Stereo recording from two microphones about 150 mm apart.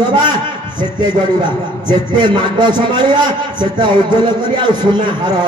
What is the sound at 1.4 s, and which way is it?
A man's voice, 30° right (ahead or behind).